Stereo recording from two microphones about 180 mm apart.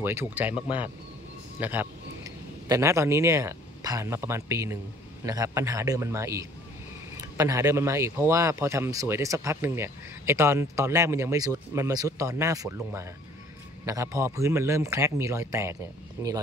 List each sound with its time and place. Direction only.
0.0 s a man's voice: 10° right (ahead or behind)